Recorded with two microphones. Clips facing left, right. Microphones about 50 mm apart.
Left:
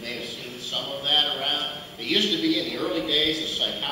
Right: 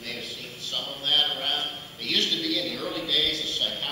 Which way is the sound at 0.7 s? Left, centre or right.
Centre.